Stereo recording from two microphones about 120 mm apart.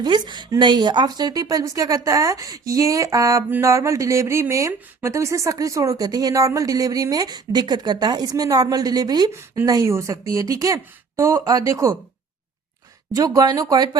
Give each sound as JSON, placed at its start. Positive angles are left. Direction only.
{"t": 0.0, "sound": "speech", "side_deg": -40}
{"t": 13.1, "sound": "speech", "side_deg": -30}